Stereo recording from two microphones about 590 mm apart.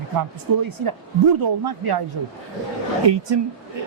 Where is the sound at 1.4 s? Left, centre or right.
Right.